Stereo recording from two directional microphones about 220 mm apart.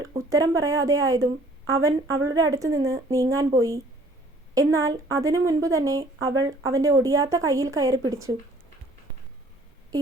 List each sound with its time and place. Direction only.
0.3 s a woman's voice: 15° right (ahead or behind)
9.9 s a woman's voice: 15° right (ahead or behind)